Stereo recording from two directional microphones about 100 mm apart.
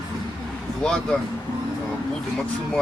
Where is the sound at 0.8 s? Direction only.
5° left (ahead or behind).